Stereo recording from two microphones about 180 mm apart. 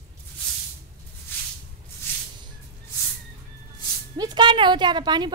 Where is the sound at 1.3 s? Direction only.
10° left (ahead or behind).